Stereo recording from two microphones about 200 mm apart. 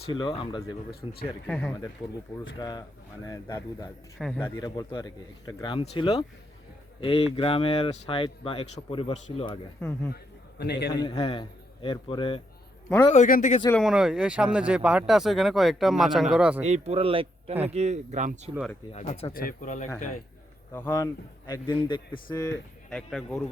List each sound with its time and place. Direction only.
0.0 s speech: 25° left (ahead or behind)
1.5 s speech: 5° left (ahead or behind)
2.6 s speech: 20° left (ahead or behind)
4.2 s speech: centre (ahead or behind)
4.4 s speech: 20° left (ahead or behind)
10.6 s a man's voice: 55° left (ahead or behind)
11.0 s speech: 20° left (ahead or behind)
13.1 s speech: 40° left (ahead or behind)
13.7 s speech: centre (ahead or behind)
16.6 s speech: 35° right (ahead or behind)
18.9 s speech: 30° left (ahead or behind)
19.3 s speech: 45° left (ahead or behind)
20.7 s speech: 10° left (ahead or behind)
22.9 s speech: centre (ahead or behind)